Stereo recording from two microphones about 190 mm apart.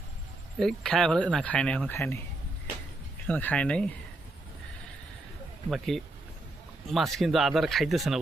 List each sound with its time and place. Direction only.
0.6 s speech: 5° left (ahead or behind)
3.2 s speech: 10° left (ahead or behind)
5.7 s speech: centre (ahead or behind)